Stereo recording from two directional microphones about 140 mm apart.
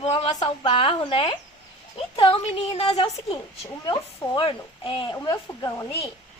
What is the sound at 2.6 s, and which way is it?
A woman's voice, 50° left (ahead or behind).